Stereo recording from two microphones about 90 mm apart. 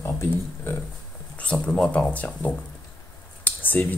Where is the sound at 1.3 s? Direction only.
15° left (ahead or behind).